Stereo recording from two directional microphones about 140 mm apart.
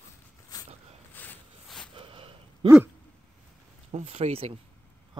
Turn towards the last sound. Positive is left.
turn(degrees=-45)  # may be behind; listen again after turning